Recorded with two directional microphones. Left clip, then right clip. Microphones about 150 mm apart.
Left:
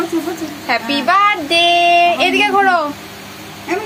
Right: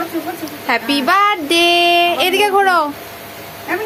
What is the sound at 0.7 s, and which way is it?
Child singing, 45° right (ahead or behind).